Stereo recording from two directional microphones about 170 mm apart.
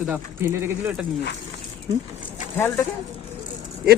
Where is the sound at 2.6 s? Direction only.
15° left (ahead or behind).